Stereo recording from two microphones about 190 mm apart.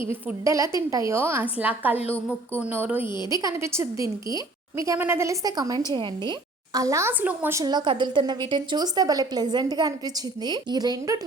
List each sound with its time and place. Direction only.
0.1 s a woman's voice: 15° right (ahead or behind)
3.2 s a woman's voice: 20° left (ahead or behind)
3.4 s a woman's voice: 15° right (ahead or behind)
7.6 s a woman's voice: 20° right (ahead or behind)